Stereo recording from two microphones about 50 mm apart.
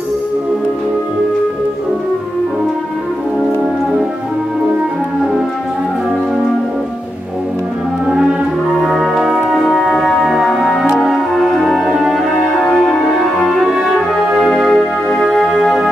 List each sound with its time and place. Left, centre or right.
8.1 s music: centre
8.8 s brass instrument: centre
9.6 s music: centre
12.6 s music: centre